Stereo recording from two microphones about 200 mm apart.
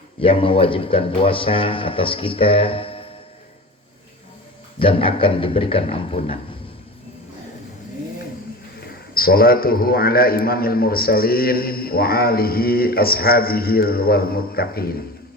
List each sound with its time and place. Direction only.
0.2 s speech: 25° left (ahead or behind)
4.8 s speech: 25° left (ahead or behind)
8.8 s a man's voice: 50° left (ahead or behind)